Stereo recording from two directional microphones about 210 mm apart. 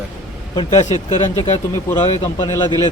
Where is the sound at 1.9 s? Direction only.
20° left (ahead or behind).